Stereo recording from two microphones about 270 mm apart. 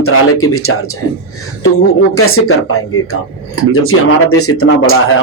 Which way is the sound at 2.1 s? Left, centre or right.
Left.